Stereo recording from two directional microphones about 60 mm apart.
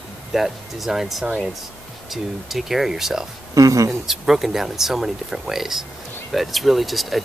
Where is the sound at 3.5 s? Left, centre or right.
Right.